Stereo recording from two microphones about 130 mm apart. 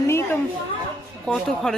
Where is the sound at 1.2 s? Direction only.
5° left (ahead or behind).